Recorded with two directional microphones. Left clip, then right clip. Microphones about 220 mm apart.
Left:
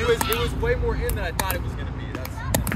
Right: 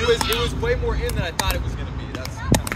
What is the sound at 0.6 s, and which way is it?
Speech, 25° right (ahead or behind).